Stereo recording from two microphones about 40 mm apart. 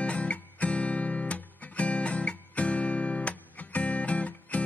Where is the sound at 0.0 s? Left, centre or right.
Left.